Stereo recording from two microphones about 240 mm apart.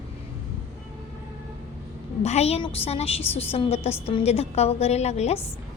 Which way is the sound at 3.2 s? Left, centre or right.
Centre.